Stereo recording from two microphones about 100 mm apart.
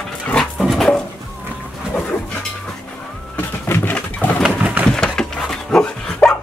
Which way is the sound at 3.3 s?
20° left (ahead or behind).